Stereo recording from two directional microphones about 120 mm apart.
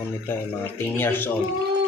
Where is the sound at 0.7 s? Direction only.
20° left (ahead or behind).